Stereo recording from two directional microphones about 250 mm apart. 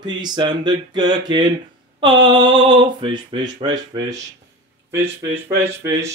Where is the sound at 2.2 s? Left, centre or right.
Centre.